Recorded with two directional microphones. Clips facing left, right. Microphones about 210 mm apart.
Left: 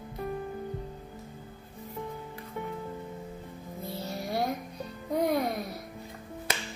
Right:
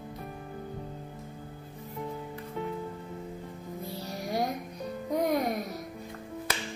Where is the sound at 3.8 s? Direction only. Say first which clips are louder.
Left 2 dB; 15° right (ahead or behind).